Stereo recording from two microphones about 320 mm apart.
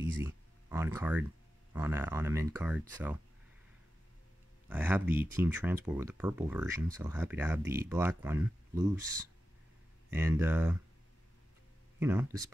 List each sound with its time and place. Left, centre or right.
0.2 s speech: centre
4.6 s speech: centre
10.1 s speech: centre
12.0 s speech: centre